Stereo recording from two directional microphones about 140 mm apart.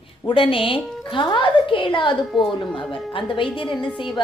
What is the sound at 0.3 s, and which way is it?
A woman's voice, 40° left (ahead or behind).